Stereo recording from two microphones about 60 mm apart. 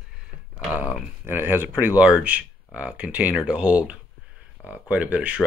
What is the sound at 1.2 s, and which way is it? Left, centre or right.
Speech, right.